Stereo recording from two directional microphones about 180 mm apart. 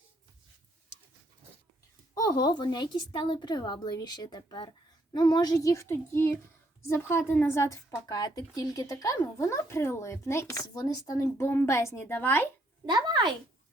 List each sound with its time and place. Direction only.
2.1 s a woman's voice: 20° left (ahead or behind)
12.8 s speech: 25° right (ahead or behind)